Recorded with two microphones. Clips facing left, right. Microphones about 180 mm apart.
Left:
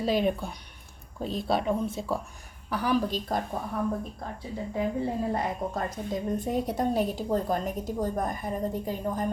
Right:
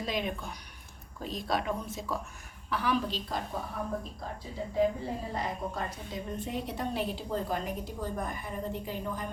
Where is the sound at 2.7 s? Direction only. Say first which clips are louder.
Left 4 dB; 40° left (ahead or behind).